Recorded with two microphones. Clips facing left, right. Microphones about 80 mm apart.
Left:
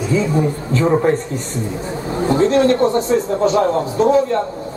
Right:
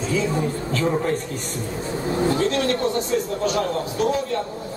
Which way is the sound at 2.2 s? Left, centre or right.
Left.